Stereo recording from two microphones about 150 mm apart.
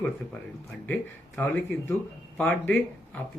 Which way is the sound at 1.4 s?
10° left (ahead or behind).